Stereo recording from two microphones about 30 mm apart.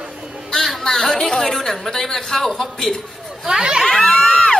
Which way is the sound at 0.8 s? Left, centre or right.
Centre.